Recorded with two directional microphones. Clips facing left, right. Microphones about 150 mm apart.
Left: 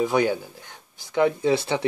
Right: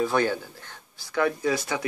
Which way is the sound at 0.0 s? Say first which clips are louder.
Left 2 dB; 15° left (ahead or behind).